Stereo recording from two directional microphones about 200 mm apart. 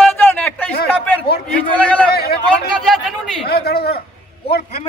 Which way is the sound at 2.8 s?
Centre (ahead or behind).